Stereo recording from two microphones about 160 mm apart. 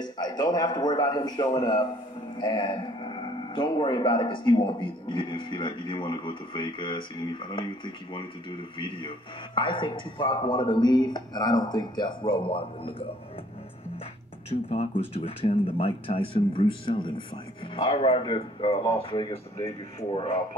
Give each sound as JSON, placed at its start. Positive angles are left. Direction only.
{"t": 0.0, "sound": "speech", "side_deg": 25}
{"t": 14.7, "sound": "speech", "side_deg": 40}